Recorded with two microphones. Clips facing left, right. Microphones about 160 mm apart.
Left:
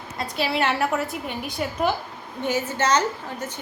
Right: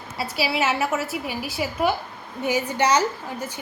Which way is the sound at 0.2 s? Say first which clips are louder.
Even; 5° right (ahead or behind).